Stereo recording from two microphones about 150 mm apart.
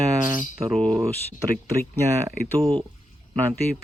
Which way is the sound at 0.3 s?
20° right (ahead or behind).